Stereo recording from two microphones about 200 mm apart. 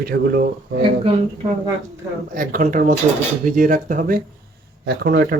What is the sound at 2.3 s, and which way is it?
Speech, 45° right (ahead or behind).